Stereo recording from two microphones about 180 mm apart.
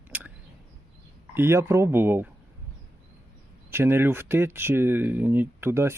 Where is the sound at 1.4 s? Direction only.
15° right (ahead or behind).